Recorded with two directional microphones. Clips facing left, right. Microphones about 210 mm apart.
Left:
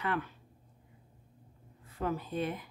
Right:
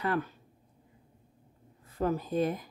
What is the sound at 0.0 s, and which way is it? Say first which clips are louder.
Speech: right 4 dB; 40° right (ahead or behind).